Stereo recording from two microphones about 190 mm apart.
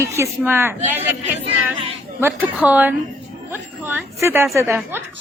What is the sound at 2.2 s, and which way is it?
A woman's voice, 10° right (ahead or behind).